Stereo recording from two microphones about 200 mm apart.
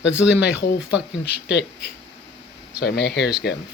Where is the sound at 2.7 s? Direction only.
55° left (ahead or behind).